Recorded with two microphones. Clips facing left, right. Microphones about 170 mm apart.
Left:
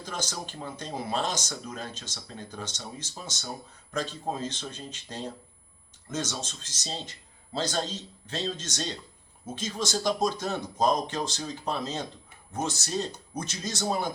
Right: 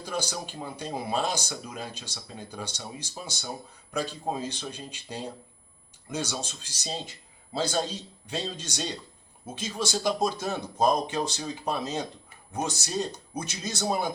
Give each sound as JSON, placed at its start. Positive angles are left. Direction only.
{"t": 0.0, "sound": "speech", "side_deg": -10}